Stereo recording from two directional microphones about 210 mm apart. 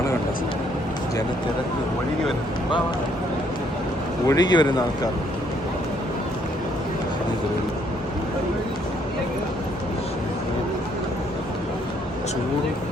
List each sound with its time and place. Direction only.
4.3 s speech: 20° left (ahead or behind)